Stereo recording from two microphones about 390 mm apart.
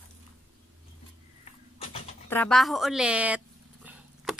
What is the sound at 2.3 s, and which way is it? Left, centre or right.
Dog, centre.